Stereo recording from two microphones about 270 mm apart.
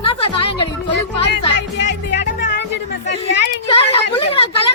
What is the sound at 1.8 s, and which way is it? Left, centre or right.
Music, left.